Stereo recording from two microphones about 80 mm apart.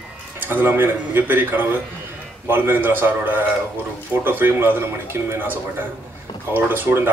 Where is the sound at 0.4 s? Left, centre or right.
Right.